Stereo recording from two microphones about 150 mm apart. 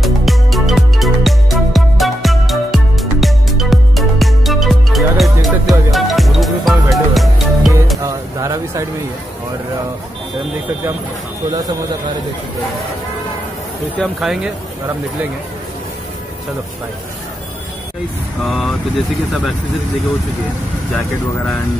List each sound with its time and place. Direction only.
0.0 s music: centre (ahead or behind)
8.0 s a sound: 20° right (ahead or behind)
13.9 s speech: centre (ahead or behind)
18.4 s speech: centre (ahead or behind)